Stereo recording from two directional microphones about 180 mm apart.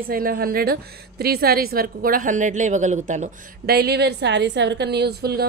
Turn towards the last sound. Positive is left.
turn(degrees=-60)  # may be behind; listen again after turning